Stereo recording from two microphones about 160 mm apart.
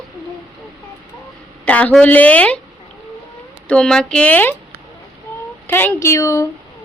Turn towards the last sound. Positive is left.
turn(degrees=20)  # may be behind; listen again after turning